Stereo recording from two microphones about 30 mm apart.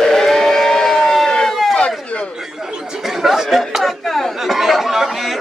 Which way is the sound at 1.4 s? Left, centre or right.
Centre.